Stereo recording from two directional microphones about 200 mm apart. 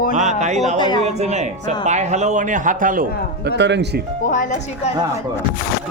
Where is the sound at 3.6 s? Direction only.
60° right (ahead or behind).